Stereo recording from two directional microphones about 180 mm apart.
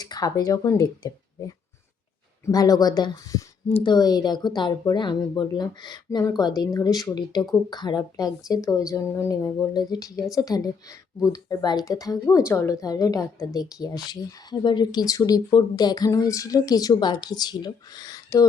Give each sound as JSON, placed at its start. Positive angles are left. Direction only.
{"t": 0.0, "sound": "a woman's voice", "side_deg": 20}
{"t": 3.7, "sound": "speech", "side_deg": 35}
{"t": 3.9, "sound": "a woman's voice", "side_deg": 20}